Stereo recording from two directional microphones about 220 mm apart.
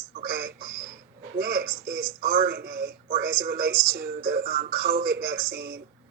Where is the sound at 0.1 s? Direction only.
35° right (ahead or behind).